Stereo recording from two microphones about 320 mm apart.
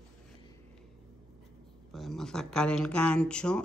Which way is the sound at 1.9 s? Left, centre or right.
Centre.